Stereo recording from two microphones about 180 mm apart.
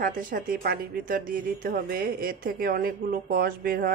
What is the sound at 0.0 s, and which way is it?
Speech, 50° right (ahead or behind).